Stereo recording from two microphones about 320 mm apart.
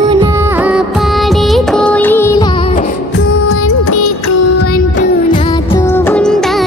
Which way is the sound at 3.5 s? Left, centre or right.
Left.